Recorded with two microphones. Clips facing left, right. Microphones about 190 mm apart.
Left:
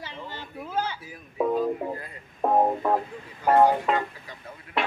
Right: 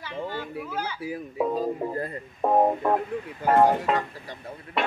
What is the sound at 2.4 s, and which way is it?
Speech, centre (ahead or behind).